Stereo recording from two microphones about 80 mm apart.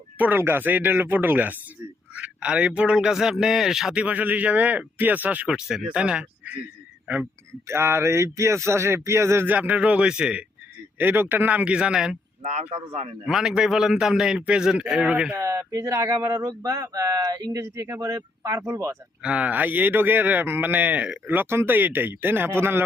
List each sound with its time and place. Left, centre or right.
0.2 s a man's voice: right
5.5 s a man's voice: centre
7.7 s speech: right
9.5 s a man's voice: centre
10.9 s speech: right; by 12.1 s centre
13.2 s a man's voice: centre
15.4 s speech: right
19.2 s speech: centre; by 22.8 s right